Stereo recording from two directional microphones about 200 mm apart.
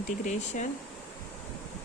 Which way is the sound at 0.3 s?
40° left (ahead or behind).